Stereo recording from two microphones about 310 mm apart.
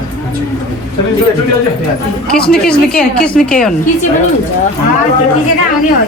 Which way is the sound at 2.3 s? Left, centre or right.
Centre.